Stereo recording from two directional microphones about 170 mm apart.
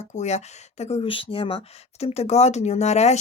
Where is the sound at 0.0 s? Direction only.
40° left (ahead or behind).